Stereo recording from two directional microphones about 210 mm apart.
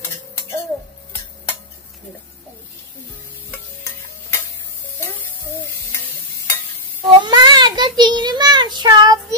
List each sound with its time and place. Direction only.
3.5 s stir: 15° left (ahead or behind)
7.2 s child singing: 20° right (ahead or behind)